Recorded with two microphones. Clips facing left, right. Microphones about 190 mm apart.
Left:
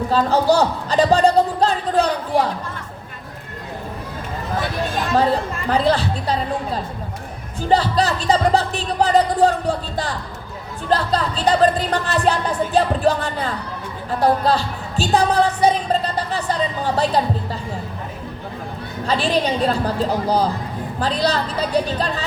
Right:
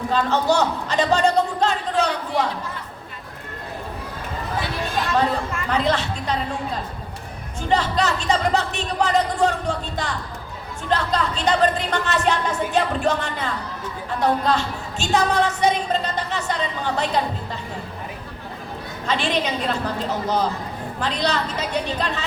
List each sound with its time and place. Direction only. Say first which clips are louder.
0.1 s a sound: left 3 dB; 35° left (ahead or behind)
5.6 s speech: left 4 dB; 35° left (ahead or behind)
7.7 s a woman's voice: left 3 dB; 35° left (ahead or behind)
19.0 s speech: left 4 dB; 35° left (ahead or behind)